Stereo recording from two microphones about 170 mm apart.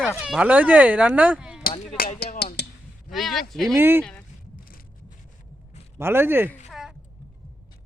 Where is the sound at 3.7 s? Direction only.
10° right (ahead or behind).